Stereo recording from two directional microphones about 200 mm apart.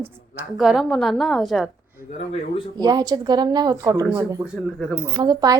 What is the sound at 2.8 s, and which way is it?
A woman's voice, 20° right (ahead or behind).